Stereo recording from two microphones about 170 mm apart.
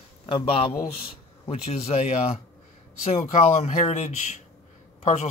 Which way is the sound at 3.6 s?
40° left (ahead or behind).